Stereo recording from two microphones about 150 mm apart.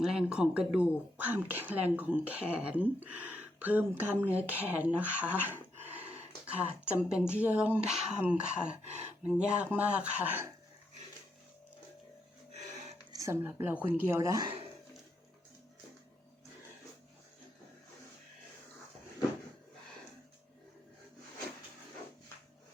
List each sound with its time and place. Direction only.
0.0 s speech: 5° right (ahead or behind)
12.7 s music: 50° right (ahead or behind)
13.1 s speech: 20° right (ahead or behind)